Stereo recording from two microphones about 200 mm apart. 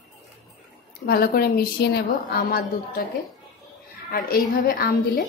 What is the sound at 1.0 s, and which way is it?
A woman's voice, 50° left (ahead or behind).